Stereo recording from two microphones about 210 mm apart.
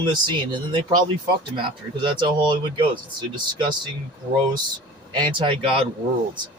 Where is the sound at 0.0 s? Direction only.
20° right (ahead or behind).